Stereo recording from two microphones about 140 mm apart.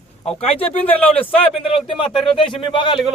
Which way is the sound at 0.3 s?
45° left (ahead or behind).